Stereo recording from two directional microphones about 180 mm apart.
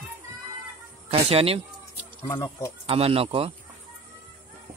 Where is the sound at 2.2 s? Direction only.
15° left (ahead or behind).